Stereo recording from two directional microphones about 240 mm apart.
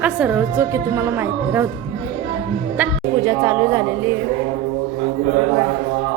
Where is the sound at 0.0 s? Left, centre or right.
Centre.